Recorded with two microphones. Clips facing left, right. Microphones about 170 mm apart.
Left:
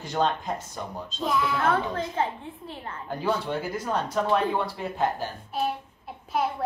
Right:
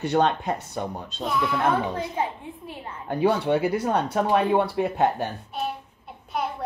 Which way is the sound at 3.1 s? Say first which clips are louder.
Right 7 dB; 65° right (ahead or behind).